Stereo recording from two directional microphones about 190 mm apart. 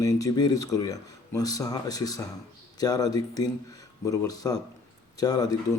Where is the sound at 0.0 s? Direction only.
20° left (ahead or behind).